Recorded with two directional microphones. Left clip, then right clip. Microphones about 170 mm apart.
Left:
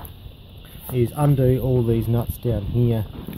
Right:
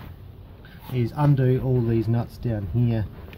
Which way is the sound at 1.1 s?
25° left (ahead or behind).